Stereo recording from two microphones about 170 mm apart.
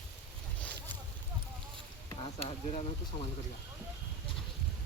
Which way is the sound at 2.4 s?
35° left (ahead or behind).